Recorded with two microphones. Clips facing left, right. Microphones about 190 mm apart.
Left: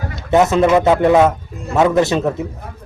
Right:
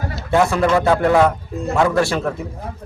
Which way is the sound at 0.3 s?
20° left (ahead or behind).